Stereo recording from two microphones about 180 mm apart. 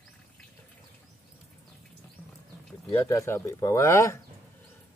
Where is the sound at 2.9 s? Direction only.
15° left (ahead or behind).